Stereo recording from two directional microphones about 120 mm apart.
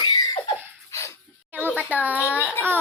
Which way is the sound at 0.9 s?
25° left (ahead or behind).